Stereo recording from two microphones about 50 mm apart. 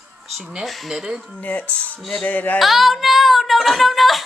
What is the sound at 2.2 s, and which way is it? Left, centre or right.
Speech, left.